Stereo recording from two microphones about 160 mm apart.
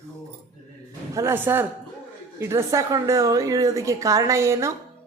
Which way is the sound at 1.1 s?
15° right (ahead or behind).